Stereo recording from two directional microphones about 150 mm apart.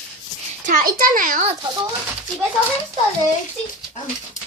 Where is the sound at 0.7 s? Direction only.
70° right (ahead or behind).